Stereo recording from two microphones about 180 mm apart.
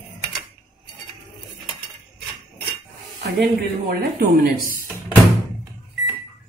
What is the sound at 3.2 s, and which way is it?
Speech, 60° right (ahead or behind).